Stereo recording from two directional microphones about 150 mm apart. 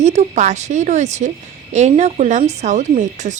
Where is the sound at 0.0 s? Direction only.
50° right (ahead or behind).